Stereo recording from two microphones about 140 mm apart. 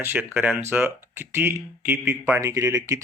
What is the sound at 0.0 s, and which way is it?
Speech, 15° right (ahead or behind).